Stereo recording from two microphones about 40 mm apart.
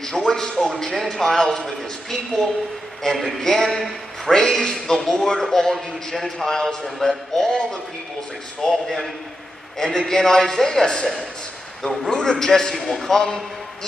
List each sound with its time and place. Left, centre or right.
0.0 s a man's voice: centre
7.4 s a man's voice: centre